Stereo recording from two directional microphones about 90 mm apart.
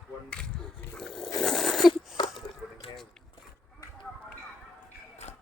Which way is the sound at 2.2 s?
60° left (ahead or behind).